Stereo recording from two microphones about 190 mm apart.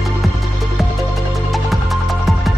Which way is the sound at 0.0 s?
Centre (ahead or behind).